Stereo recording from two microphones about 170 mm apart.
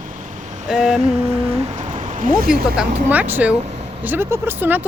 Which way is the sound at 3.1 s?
10° right (ahead or behind).